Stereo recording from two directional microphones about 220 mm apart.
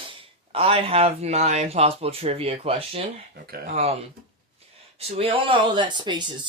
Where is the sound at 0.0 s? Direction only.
25° right (ahead or behind).